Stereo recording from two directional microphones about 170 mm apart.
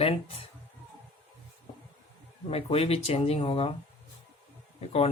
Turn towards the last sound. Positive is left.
turn(degrees=35)  # may be behind; listen again after turning